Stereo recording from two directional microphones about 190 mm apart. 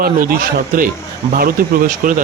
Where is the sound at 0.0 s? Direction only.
50° right (ahead or behind).